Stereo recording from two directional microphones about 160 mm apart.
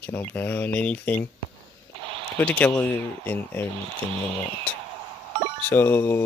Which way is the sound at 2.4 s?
10° left (ahead or behind).